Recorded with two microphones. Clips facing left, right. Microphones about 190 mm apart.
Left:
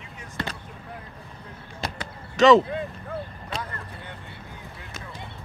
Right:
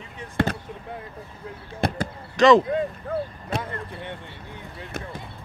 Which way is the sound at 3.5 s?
60° right (ahead or behind).